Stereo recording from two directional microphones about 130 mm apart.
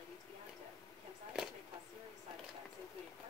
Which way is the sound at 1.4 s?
5° right (ahead or behind).